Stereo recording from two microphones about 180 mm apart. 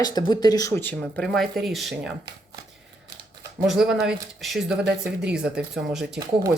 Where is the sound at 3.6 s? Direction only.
5° right (ahead or behind).